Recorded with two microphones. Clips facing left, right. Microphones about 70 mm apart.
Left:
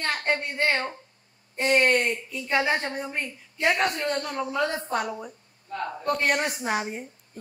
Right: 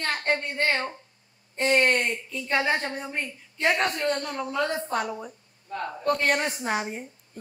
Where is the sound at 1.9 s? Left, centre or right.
Centre.